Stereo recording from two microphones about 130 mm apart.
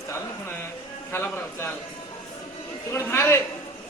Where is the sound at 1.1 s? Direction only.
20° left (ahead or behind).